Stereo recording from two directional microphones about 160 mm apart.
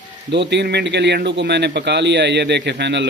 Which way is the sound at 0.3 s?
90° right.